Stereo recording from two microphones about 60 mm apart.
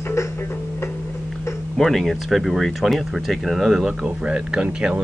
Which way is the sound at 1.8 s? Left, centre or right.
Centre.